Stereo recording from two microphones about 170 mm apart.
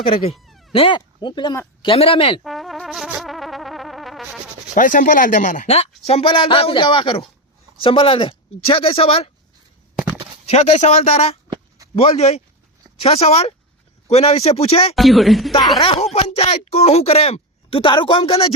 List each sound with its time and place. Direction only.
0.0 s speech: 35° left (ahead or behind)
0.3 s a sound: centre (ahead or behind)
0.7 s speech: 30° left (ahead or behind)
2.4 s music: centre (ahead or behind)
4.7 s speech: 50° left (ahead or behind); by 9.3 s 35° left (ahead or behind)
10.4 s speech: 40° left (ahead or behind)
14.9 s speech: centre (ahead or behind)
15.8 s speech: 35° left (ahead or behind)